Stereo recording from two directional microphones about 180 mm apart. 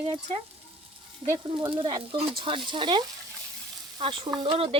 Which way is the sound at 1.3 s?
25° right (ahead or behind).